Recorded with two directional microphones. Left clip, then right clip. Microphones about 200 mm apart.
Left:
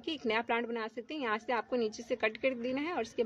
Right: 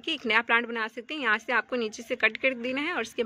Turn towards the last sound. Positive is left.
turn(degrees=-10)  # may be behind; listen again after turning